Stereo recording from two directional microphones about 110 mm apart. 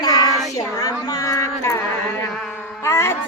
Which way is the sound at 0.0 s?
35° left (ahead or behind).